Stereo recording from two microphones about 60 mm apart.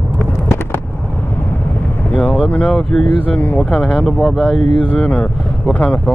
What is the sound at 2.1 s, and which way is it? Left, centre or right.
Vehicle, left.